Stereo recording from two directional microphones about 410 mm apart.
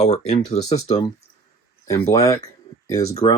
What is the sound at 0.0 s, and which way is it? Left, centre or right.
Speech, centre.